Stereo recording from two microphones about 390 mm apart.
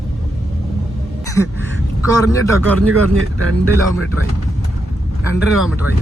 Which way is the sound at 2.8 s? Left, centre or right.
Right.